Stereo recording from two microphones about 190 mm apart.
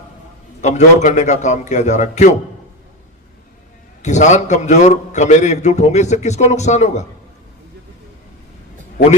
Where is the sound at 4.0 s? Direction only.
40° left (ahead or behind).